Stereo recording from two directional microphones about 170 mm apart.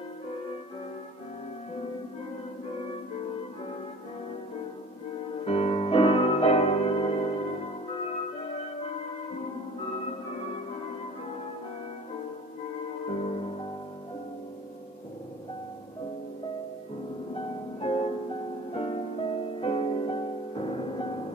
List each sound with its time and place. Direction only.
5.4 s music: 35° left (ahead or behind)
13.1 s music: 40° left (ahead or behind)
17.7 s music: 35° left (ahead or behind)